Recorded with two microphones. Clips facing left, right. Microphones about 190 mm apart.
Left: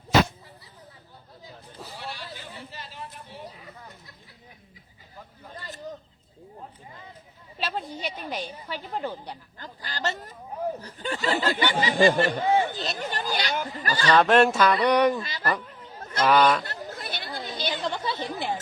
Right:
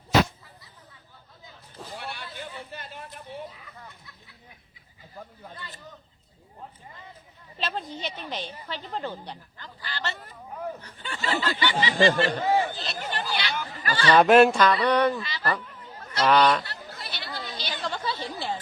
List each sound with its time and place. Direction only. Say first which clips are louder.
2.0 s a sound: even; 55° right (ahead or behind)
5.5 s a sound: left 3 dB; 40° left (ahead or behind)
7.6 s a woman's voice: left 1 dB; 10° left (ahead or behind)
9.6 s speech: left 4 dB; 40° left (ahead or behind)
12.7 s a sound: left 2 dB; 40° left (ahead or behind)
14.2 s speech: right 3 dB; 5° right (ahead or behind)
14.6 s a woman's voice: left 1 dB; 10° left (ahead or behind)
15.2 s speech: even; 45° left (ahead or behind)
16.2 s a woman's voice: even; 5° left (ahead or behind)
16.6 s chatter: left 5 dB; 50° left (ahead or behind)
17.7 s chatter: left 2 dB; 20° left (ahead or behind)